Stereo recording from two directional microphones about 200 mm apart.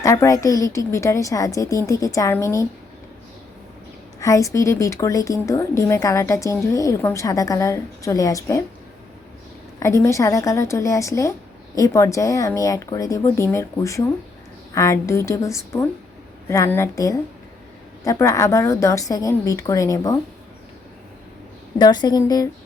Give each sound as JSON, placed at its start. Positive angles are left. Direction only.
{"t": 0.0, "sound": "a woman's voice", "side_deg": 15}
{"t": 4.2, "sound": "a woman's voice", "side_deg": 15}
{"t": 9.8, "sound": "a woman's voice", "side_deg": 15}
{"t": 21.8, "sound": "a woman's voice", "side_deg": 20}